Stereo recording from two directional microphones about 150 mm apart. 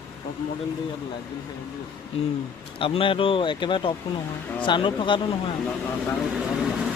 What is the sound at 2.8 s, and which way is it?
Speech, 35° left (ahead or behind).